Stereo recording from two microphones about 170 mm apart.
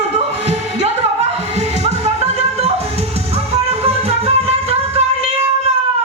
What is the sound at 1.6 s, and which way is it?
Music, 40° right (ahead or behind).